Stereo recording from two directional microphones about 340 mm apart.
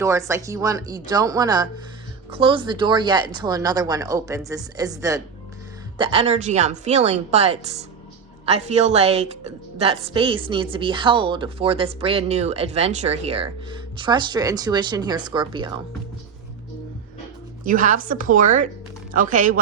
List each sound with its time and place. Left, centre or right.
0.0 s a woman's voice: centre
17.7 s a woman's voice: right